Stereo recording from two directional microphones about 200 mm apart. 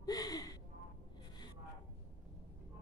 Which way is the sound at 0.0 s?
20° left (ahead or behind).